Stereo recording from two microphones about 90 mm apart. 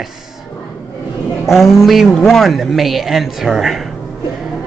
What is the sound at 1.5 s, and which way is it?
A man's voice, 5° right (ahead or behind).